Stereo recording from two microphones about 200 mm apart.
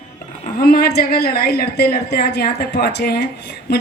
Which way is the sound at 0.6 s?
50° left (ahead or behind).